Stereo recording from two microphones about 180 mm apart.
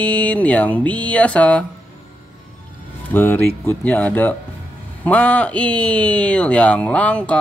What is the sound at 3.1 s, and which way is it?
Speech, 10° left (ahead or behind).